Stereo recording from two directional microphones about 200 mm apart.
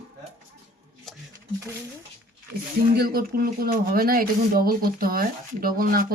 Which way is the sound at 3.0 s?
50° right (ahead or behind).